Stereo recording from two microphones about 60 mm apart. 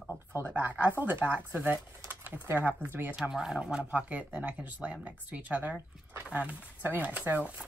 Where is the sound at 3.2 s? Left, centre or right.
Centre.